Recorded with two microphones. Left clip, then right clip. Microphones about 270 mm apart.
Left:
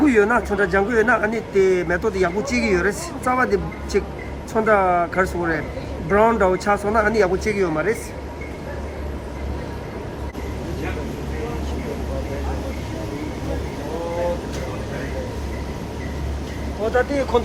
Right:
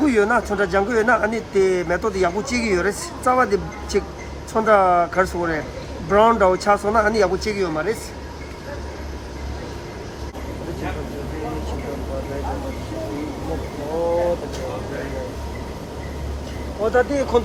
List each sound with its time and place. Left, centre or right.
0.0 s a man's voice: centre
16.9 s a man's voice: centre